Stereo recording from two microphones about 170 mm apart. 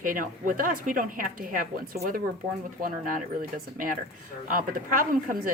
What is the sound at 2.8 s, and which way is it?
A woman's voice, 55° right (ahead or behind).